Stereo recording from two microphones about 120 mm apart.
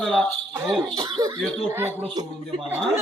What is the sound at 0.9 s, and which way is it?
Speech, 30° right (ahead or behind).